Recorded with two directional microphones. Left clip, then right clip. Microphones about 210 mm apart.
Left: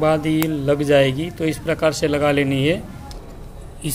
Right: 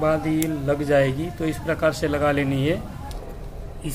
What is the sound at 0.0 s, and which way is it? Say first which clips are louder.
A man's voice: left 4 dB; 35° left (ahead or behind).